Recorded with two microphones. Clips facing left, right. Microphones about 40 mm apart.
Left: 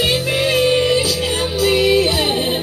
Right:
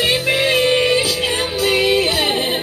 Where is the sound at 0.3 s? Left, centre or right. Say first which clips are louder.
Right 1 dB; right.